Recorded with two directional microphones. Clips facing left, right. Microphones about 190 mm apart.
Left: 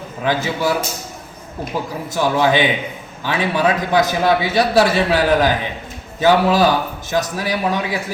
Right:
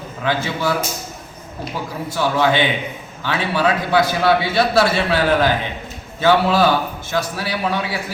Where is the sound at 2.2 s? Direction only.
15° left (ahead or behind).